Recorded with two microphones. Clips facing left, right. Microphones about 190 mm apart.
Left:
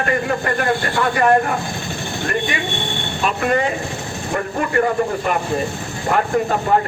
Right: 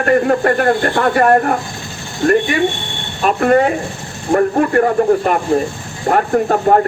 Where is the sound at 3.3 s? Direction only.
45° right (ahead or behind).